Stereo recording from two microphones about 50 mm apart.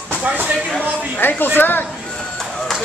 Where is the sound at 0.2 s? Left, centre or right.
Right.